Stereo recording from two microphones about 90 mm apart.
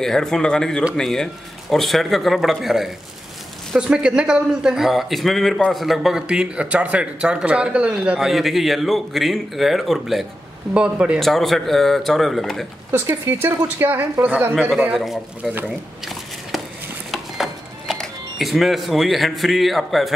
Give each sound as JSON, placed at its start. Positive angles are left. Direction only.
{"t": 0.0, "sound": "a man's voice", "side_deg": 5}
{"t": 11.1, "sound": "a man's voice", "side_deg": 0}
{"t": 12.9, "sound": "speech", "side_deg": -30}
{"t": 14.9, "sound": "a man's voice", "side_deg": 0}
{"t": 16.5, "sound": "a sound", "side_deg": 0}
{"t": 17.1, "sound": "music", "side_deg": 0}
{"t": 17.9, "sound": "speech", "side_deg": 5}